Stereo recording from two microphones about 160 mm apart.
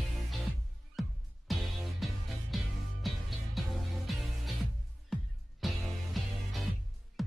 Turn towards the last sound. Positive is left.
turn(degrees=0)  # may be behind; listen again after turning